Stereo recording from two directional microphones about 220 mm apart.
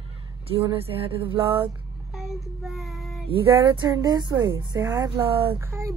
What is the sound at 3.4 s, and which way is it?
A woman's voice, 15° right (ahead or behind).